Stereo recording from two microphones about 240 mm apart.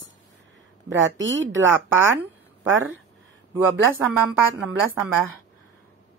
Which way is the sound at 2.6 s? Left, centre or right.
Right.